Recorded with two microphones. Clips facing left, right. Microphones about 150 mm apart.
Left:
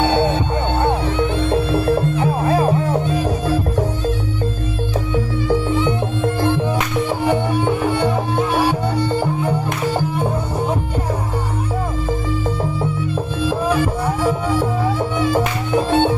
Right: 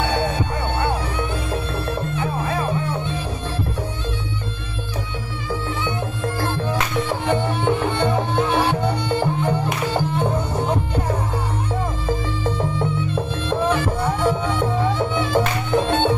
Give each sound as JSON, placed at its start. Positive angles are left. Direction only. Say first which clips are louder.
{"t": 0.0, "sound": "music", "louder": "left 5 dB", "side_deg": 25}
{"t": 7.1, "sound": "music", "louder": "left 4 dB", "side_deg": 10}
{"t": 12.7, "sound": "music", "louder": "left 1 dB", "side_deg": 5}